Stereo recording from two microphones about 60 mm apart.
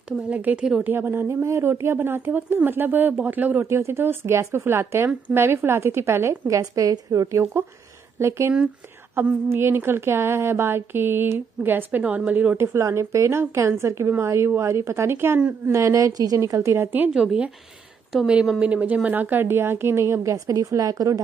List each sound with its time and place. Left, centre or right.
0.3 s a woman's voice: right
0.8 s speech: right
1.2 s a woman's voice: right
3.6 s a woman's voice: right
6.4 s speech: right
8.2 s a woman's voice: right
12.0 s a woman's voice: right
12.8 s a woman's voice: right
15.1 s speech: right
15.6 s speech: right
16.5 s a woman's voice: right
17.1 s speech: centre
18.6 s a woman's voice: right
20.3 s speech: right